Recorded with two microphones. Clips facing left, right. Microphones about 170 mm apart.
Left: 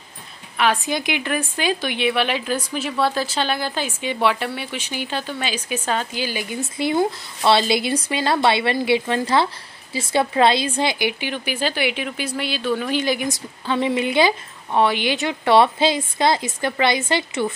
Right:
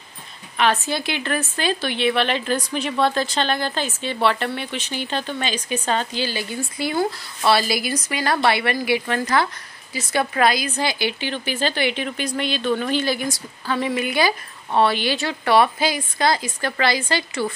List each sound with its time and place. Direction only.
0.6 s a woman's voice: 15° left (ahead or behind)
13.0 s a woman's voice: 15° left (ahead or behind)